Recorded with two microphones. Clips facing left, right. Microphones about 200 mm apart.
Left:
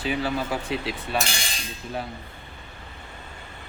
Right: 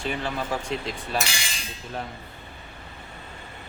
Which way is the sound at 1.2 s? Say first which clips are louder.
Left 1 dB; 50° left (ahead or behind).